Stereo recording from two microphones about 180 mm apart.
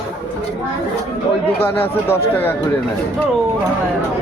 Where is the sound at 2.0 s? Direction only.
15° left (ahead or behind).